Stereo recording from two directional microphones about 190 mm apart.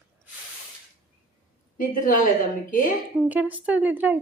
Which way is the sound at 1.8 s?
45° left (ahead or behind).